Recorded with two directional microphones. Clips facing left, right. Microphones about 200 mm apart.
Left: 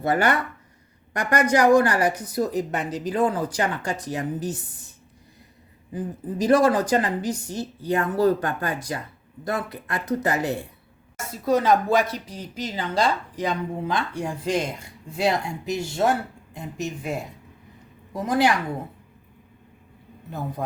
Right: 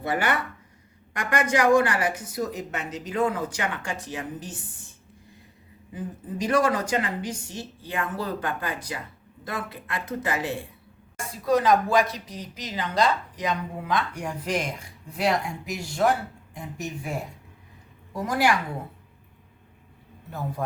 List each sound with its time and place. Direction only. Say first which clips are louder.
0.0 s speech: left 4 dB; 45° left (ahead or behind)
6.4 s speech: left 5 dB; 35° left (ahead or behind)
11.4 s a woman's voice: left 1 dB; 25° left (ahead or behind)
20.6 s speech: even; 20° left (ahead or behind)